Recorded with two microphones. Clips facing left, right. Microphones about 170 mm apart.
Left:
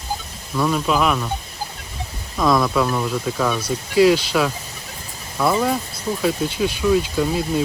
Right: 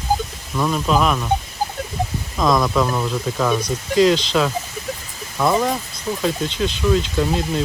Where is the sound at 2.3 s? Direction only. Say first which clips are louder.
Even; 20° right (ahead or behind).